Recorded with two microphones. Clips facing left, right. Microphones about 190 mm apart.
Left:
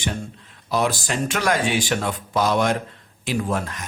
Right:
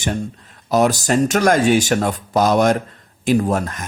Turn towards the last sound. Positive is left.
turn(degrees=-45)  # may be behind; listen again after turning